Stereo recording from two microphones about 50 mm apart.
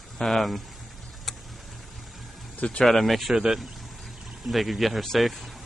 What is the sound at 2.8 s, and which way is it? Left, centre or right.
Speech, centre.